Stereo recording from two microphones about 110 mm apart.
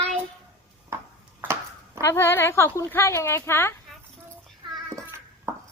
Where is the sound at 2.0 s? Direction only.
20° left (ahead or behind).